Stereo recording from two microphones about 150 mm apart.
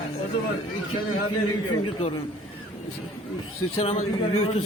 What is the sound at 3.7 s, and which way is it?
Speech, 40° left (ahead or behind).